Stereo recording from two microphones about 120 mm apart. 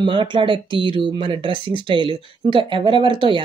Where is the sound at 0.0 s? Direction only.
45° right (ahead or behind).